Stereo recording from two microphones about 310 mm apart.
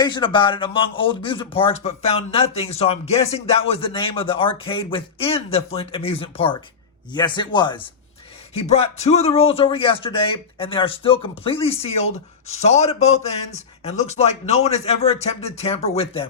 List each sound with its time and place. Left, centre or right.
0.0 s speech: centre